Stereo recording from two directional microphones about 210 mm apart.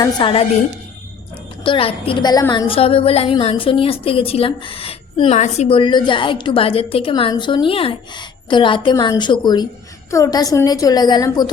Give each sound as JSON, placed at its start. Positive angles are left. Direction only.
{"t": 0.0, "sound": "a woman's voice", "side_deg": 25}
{"t": 1.6, "sound": "a woman's voice", "side_deg": 25}